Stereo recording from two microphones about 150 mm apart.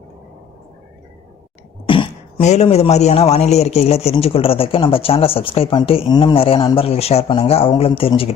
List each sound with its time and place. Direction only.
1.9 s throat clearing: 35° left (ahead or behind)
2.4 s a man's voice: 45° left (ahead or behind)